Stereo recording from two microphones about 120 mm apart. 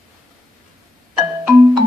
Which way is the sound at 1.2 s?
25° right (ahead or behind).